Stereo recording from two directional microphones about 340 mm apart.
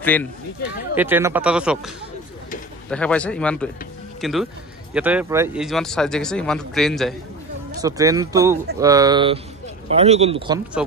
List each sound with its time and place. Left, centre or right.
0.0 s speech: centre
2.9 s speech: centre
7.8 s speech: centre